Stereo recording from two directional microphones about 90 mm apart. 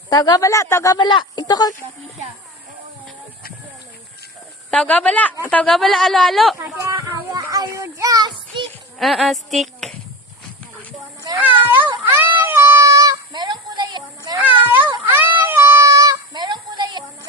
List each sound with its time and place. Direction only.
0.1 s speech: 50° left (ahead or behind); by 0.9 s 35° left (ahead or behind)
0.9 s speech: 60° left (ahead or behind)
4.7 s a woman's voice: 15° left (ahead or behind)
5.7 s speech: centre (ahead or behind)
6.6 s a child's voice: 35° right (ahead or behind)
9.0 s speech: centre (ahead or behind)
11.3 s a sound: 20° right (ahead or behind)
12.4 s music: 25° right (ahead or behind); by 14.0 s 55° right (ahead or behind)
14.3 s cat: 20° right (ahead or behind)
15.1 s child singing: 20° right (ahead or behind); by 16.1 s 40° right (ahead or behind)
16.3 s a sound: 55° right (ahead or behind)